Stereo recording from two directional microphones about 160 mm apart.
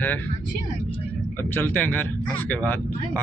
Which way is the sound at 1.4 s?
15° left (ahead or behind).